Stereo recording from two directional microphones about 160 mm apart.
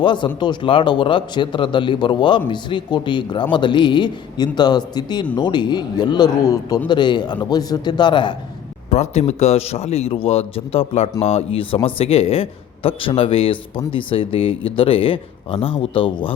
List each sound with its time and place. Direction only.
0.0 s a man's voice: 30° left (ahead or behind)
8.9 s a man's voice: 45° left (ahead or behind)